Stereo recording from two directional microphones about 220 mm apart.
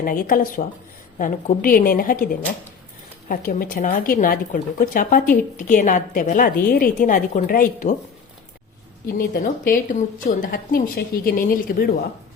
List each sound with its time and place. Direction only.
0.0 s speech: 40° left (ahead or behind)
9.1 s speech: 40° left (ahead or behind)